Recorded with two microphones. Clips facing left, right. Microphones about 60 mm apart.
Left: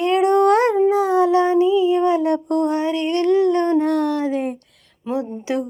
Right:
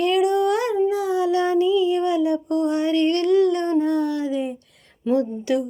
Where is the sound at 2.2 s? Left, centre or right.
Left.